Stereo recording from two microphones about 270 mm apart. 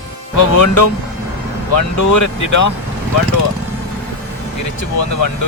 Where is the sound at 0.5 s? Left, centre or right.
Left.